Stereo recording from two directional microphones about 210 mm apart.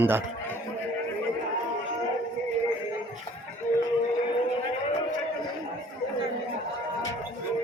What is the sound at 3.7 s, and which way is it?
Music, 40° left (ahead or behind).